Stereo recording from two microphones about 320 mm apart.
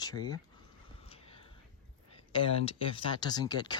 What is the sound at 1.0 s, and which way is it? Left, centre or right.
Whispering, centre.